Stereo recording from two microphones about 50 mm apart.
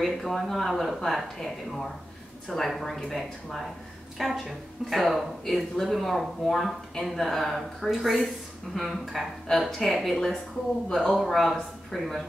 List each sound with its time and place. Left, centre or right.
0.0 s speech: centre